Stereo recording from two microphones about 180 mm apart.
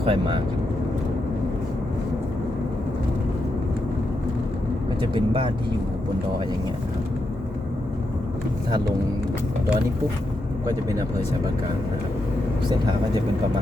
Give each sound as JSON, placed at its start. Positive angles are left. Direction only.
{"t": 0.0, "sound": "speech", "side_deg": -30}
{"t": 4.9, "sound": "speech", "side_deg": -30}